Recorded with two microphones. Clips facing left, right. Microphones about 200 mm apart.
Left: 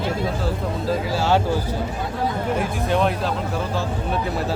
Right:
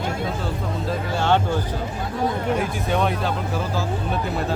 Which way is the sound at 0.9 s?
5° left (ahead or behind).